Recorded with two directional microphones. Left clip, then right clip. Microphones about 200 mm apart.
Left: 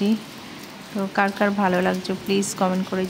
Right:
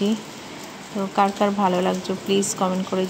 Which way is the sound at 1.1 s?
15° left (ahead or behind).